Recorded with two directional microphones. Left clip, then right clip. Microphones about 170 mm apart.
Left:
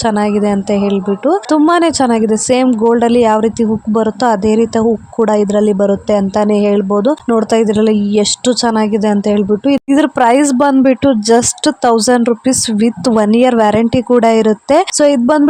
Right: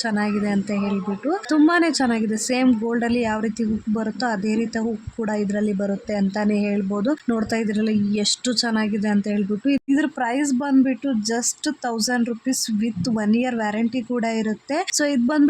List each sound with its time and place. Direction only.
0.0 s a woman's voice: 45° left (ahead or behind)
2.6 s speech: 25° left (ahead or behind)
3.0 s speech: 40° left (ahead or behind)